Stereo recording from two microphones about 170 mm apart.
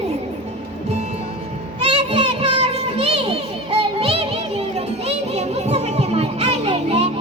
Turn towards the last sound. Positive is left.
turn(degrees=-40)  # may be behind; listen again after turning